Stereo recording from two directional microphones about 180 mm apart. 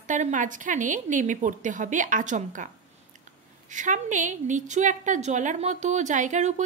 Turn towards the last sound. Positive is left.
turn(degrees=-45)  # may be behind; listen again after turning